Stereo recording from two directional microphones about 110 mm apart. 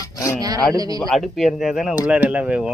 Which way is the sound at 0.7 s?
35° right (ahead or behind).